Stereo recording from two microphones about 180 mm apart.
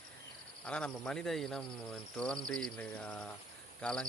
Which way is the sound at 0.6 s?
5° left (ahead or behind).